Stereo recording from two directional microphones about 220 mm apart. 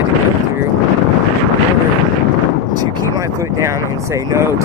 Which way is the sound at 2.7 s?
15° right (ahead or behind).